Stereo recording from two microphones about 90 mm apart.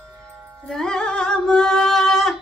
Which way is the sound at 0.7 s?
5° left (ahead or behind).